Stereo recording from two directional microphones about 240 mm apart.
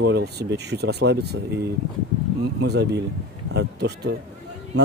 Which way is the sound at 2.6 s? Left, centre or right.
Right.